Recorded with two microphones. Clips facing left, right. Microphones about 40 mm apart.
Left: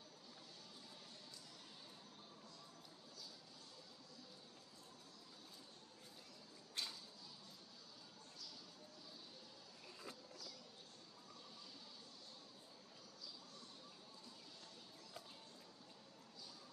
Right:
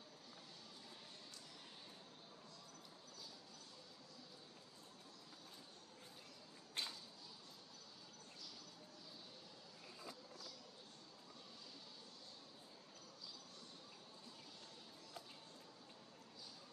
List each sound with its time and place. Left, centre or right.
6.8 s whip: right